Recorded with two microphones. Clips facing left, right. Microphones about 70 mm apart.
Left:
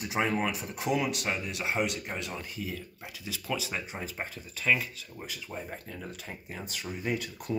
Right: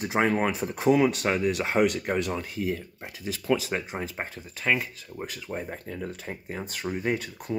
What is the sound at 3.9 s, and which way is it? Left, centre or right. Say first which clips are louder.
Speech: right 4 dB; right.